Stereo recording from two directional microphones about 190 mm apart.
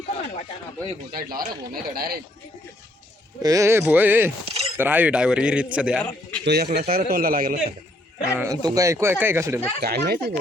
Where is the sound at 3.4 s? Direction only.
15° right (ahead or behind).